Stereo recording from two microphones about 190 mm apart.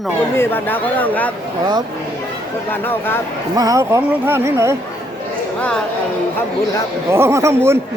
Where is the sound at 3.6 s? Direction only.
15° right (ahead or behind).